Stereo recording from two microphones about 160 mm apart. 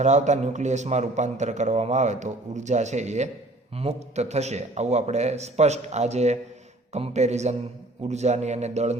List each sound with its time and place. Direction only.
0.0 s a man's voice: 45° right (ahead or behind)